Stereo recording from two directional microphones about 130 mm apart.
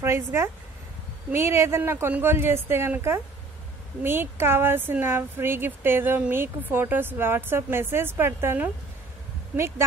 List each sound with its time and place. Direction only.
0.0 s a woman's voice: 20° right (ahead or behind)